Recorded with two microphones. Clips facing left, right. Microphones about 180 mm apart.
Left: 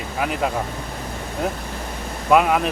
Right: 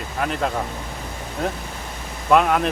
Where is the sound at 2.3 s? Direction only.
5° left (ahead or behind).